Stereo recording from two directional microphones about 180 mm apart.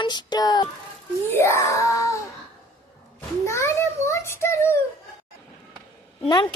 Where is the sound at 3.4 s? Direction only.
15° left (ahead or behind).